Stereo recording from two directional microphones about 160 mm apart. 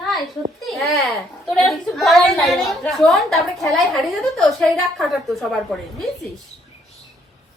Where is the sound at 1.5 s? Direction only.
Centre (ahead or behind).